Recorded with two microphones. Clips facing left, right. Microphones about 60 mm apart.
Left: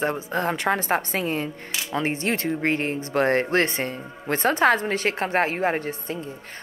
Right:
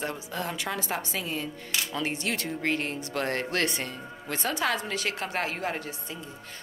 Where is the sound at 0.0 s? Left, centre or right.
Left.